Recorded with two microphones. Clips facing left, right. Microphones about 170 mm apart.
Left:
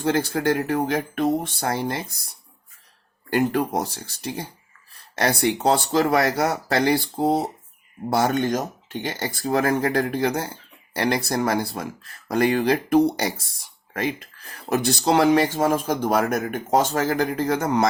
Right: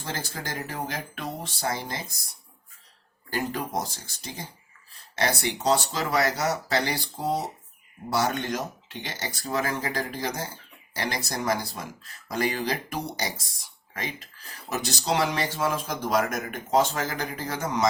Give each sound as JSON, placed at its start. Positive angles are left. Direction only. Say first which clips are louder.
{"t": 0.0, "sound": "speech", "louder": "left 13 dB", "side_deg": 65}
{"t": 3.2, "sound": "speech", "louder": "left 9 dB", "side_deg": 60}